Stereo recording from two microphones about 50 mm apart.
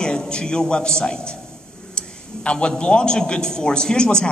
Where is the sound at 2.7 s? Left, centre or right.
Centre.